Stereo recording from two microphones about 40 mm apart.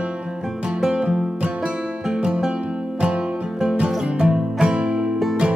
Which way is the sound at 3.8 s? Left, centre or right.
Right.